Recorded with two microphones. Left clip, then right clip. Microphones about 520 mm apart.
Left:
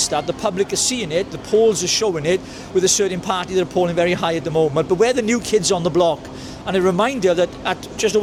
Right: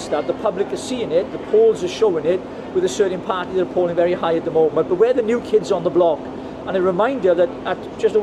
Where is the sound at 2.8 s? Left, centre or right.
Left.